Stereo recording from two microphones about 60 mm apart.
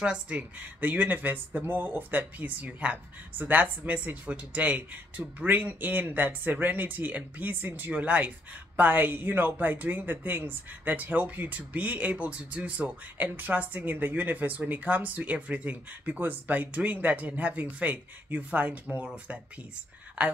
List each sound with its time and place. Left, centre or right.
0.0 s speech: centre
0.4 s speech: right
19.0 s speech: centre